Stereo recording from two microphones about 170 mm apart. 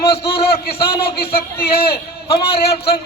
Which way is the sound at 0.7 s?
65° left (ahead or behind).